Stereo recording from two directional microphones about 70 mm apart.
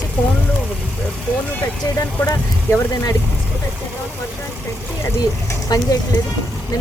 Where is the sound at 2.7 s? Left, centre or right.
Left.